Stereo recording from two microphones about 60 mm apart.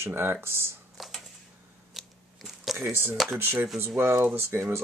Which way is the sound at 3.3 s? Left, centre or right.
Right.